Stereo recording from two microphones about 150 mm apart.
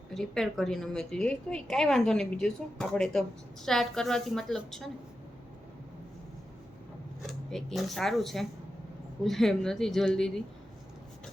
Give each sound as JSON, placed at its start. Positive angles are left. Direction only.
{"t": 0.1, "sound": "a woman's voice", "side_deg": 0}
{"t": 7.2, "sound": "a woman's voice", "side_deg": 0}